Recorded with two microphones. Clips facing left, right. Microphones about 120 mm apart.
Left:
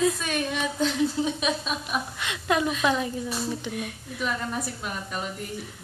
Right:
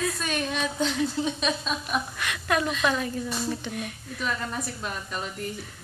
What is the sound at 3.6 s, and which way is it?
Speech, 5° left (ahead or behind).